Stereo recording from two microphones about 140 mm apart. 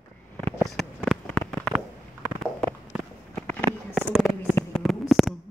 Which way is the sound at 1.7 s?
15° right (ahead or behind).